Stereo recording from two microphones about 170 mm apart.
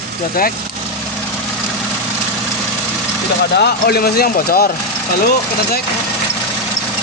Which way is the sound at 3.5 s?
70° left (ahead or behind).